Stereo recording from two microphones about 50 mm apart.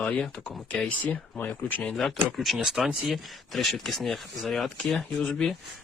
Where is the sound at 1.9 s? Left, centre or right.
Centre.